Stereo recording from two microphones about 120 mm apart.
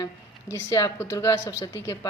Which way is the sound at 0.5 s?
25° left (ahead or behind).